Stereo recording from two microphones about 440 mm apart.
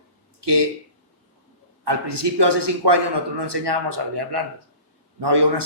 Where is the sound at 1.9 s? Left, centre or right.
Right.